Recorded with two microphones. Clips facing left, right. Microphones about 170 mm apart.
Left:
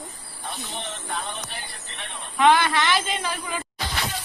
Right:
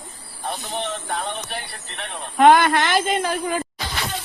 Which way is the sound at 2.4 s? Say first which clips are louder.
Right 5 dB; 50° right (ahead or behind).